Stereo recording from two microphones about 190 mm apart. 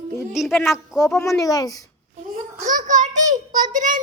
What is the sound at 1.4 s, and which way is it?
Speech, 20° left (ahead or behind).